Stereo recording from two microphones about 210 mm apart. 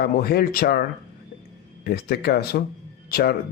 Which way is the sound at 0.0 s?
50° left (ahead or behind).